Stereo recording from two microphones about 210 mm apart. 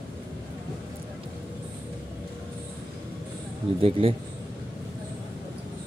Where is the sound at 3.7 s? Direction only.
25° right (ahead or behind).